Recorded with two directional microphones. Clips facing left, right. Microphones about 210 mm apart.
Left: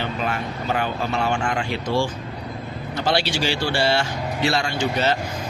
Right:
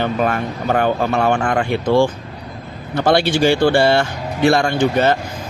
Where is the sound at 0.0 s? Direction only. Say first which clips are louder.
Right 7 dB; 55° right (ahead or behind).